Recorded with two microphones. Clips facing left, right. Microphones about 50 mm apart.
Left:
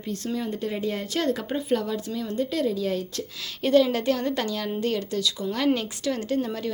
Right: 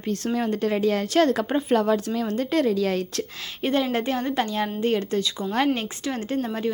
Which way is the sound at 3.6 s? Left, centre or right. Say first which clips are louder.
Left 3 dB; right.